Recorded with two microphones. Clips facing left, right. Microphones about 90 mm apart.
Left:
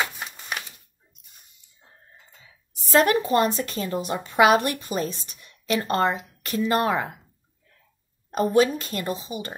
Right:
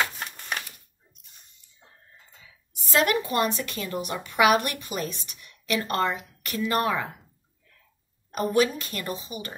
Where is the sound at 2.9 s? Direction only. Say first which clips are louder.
Left 4 dB; 30° left (ahead or behind).